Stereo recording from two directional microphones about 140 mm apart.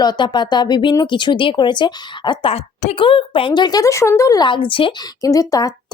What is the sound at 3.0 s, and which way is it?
A woman's voice, 40° left (ahead or behind).